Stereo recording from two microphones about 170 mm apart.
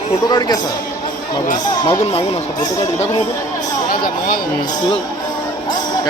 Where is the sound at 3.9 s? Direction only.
55° left (ahead or behind).